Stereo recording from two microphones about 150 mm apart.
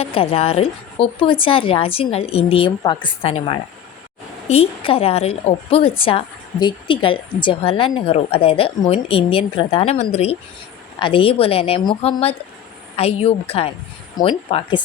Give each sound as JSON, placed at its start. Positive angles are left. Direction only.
{"t": 0.0, "sound": "a woman's voice", "side_deg": 40}